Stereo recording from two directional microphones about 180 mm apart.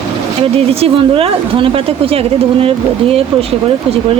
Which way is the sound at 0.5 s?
35° right (ahead or behind).